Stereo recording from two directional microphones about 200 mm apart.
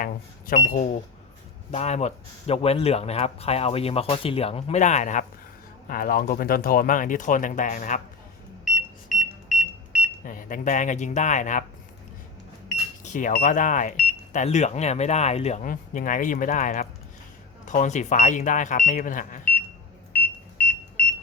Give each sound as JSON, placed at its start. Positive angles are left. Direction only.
{"t": 0.0, "sound": "a sound", "side_deg": 40}
{"t": 1.7, "sound": "speech", "side_deg": 35}
{"t": 8.6, "sound": "smoke detector", "side_deg": 0}
{"t": 10.2, "sound": "speech", "side_deg": 40}
{"t": 13.0, "sound": "speech", "side_deg": 40}
{"t": 20.1, "sound": "buzzer", "side_deg": 10}